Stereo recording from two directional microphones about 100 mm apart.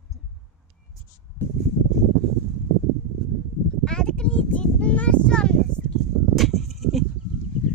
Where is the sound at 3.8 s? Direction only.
5° left (ahead or behind).